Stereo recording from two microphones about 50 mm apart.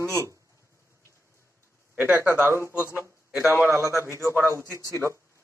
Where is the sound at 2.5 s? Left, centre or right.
Right.